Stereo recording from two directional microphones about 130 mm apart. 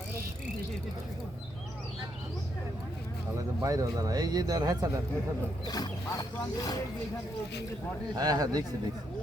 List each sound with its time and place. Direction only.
3.3 s speech: 25° right (ahead or behind)
5.6 s speech: 30° left (ahead or behind)
8.1 s speech: 30° right (ahead or behind)